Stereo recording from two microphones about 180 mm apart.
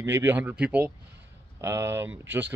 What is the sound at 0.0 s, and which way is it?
Speech, 15° right (ahead or behind).